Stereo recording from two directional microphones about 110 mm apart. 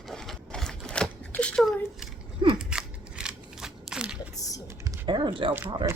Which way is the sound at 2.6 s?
5° right (ahead or behind).